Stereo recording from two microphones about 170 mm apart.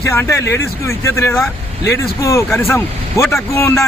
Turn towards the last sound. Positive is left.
turn(degrees=15)  # may be behind; listen again after turning